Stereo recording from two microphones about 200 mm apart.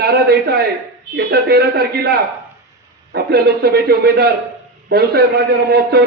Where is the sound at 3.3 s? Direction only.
50° right (ahead or behind).